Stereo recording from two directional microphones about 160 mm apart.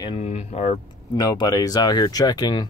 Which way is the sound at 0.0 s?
35° left (ahead or behind).